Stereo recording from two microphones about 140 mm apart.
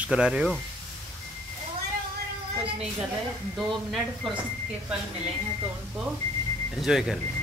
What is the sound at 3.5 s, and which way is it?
Speech, centre (ahead or behind).